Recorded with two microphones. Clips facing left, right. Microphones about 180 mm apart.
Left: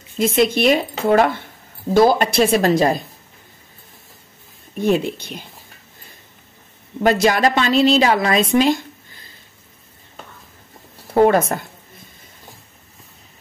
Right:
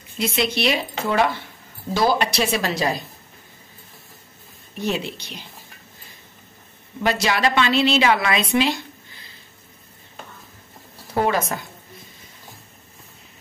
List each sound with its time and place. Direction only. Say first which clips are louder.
0.2 s a woman's voice: left 6 dB; 50° left (ahead or behind)
4.7 s a woman's voice: left 7 dB; 50° left (ahead or behind)
7.0 s a woman's voice: left 6 dB; 45° left (ahead or behind)
11.1 s a woman's voice: left 7 dB; 55° left (ahead or behind)